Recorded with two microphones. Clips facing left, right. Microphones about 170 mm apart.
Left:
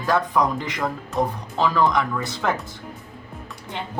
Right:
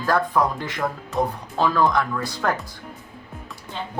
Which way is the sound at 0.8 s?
Centre (ahead or behind).